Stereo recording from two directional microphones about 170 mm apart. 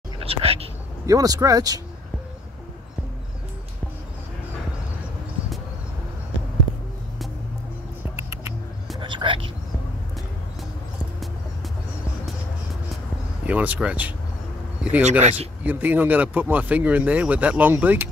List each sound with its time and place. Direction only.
0.2 s whispering: 35° right (ahead or behind)
1.0 s speech: 20° right (ahead or behind)
8.2 s rodents: 15° right (ahead or behind)
9.0 s a sound: 30° right (ahead or behind)
13.5 s speech: 10° right (ahead or behind)
15.0 s speech: 40° right (ahead or behind)
15.6 s speech: 10° right (ahead or behind)